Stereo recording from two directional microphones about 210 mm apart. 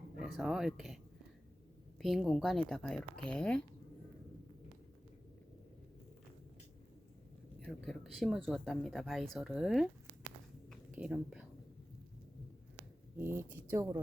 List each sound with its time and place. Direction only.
0.2 s speech: centre (ahead or behind)
2.0 s speech: centre (ahead or behind)
7.6 s speech: centre (ahead or behind)
10.7 s whispering: 5° right (ahead or behind)
13.1 s speech: 10° right (ahead or behind)